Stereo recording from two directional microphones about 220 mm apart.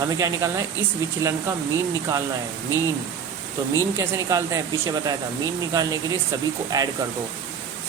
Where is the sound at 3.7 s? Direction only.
15° right (ahead or behind).